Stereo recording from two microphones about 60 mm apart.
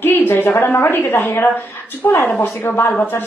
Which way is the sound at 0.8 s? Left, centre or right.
Left.